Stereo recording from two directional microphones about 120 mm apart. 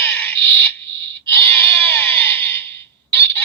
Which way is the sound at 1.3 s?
20° left (ahead or behind).